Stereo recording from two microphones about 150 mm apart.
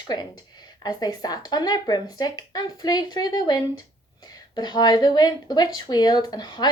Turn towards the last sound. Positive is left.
turn(degrees=30)  # may be behind; listen again after turning